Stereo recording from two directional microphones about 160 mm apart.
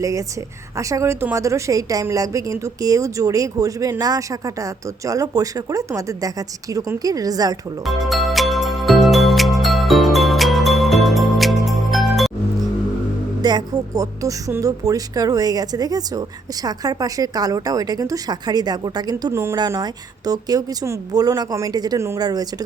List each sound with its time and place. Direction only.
0.0 s a woman's voice: 20° right (ahead or behind)
7.9 s music: centre (ahead or behind)
13.4 s a woman's voice: 25° right (ahead or behind)